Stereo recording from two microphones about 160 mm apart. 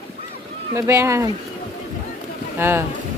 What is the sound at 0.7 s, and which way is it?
Speech, 15° right (ahead or behind).